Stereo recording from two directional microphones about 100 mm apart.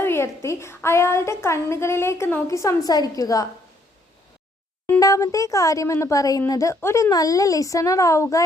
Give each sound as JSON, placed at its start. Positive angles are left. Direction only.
{"t": 0.0, "sound": "a woman's voice", "side_deg": 25}
{"t": 4.9, "sound": "speech", "side_deg": 35}